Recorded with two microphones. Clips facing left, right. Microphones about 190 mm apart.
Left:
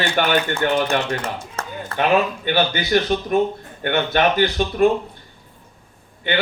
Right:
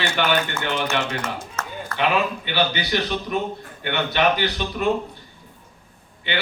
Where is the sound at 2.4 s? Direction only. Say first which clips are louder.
Left 4 dB; 45° left (ahead or behind).